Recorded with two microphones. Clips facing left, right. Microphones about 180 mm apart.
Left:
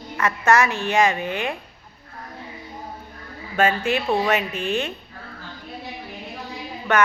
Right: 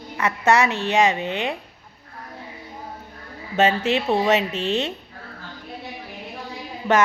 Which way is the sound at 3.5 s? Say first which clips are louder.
Right 1 dB; 25° right (ahead or behind).